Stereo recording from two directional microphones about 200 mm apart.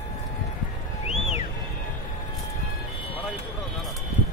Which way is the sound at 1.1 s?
30° left (ahead or behind).